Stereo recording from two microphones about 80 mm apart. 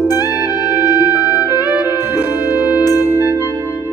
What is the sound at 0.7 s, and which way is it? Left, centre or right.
Music, right.